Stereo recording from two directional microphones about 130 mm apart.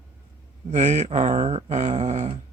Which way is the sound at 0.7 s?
70° right (ahead or behind).